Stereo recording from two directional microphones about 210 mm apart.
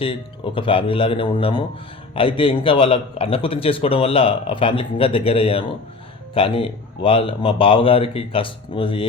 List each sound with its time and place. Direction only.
0.0 s a man's voice: 25° left (ahead or behind)